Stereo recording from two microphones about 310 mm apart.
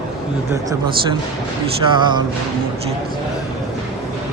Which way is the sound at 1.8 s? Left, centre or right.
Centre.